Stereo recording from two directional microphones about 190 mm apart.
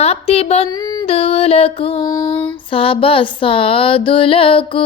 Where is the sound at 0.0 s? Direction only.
35° left (ahead or behind).